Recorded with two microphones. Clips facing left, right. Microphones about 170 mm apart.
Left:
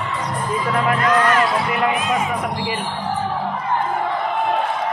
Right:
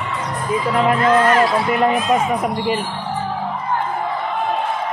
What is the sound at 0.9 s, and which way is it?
Speech, 25° right (ahead or behind).